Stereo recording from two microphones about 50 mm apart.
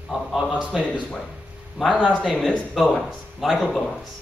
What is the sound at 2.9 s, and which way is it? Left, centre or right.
Speech, centre.